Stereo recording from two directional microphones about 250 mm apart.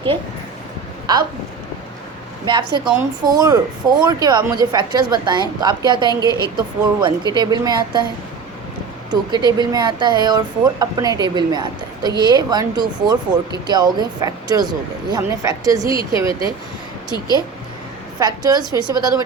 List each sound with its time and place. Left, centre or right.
1.1 s speech: centre
2.4 s a woman's voice: centre
6.1 s a woman's voice: centre
6.4 s speech: centre
9.0 s speech: centre
18.2 s speech: centre